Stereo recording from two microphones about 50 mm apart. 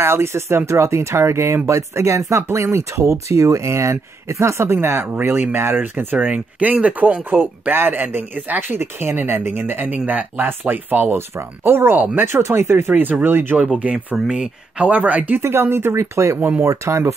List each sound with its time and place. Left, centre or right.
0.0 s speech: right
5.2 s speech: right
5.8 s speech: right
6.1 s speech: right
7.2 s speech: right
11.1 s speech: right
12.3 s speech: right
12.9 s speech: right
13.7 s speech: right
15.4 s speech: right
16.0 s speech: right